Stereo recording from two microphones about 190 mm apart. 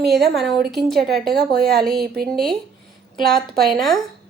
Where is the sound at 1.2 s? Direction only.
55° right (ahead or behind).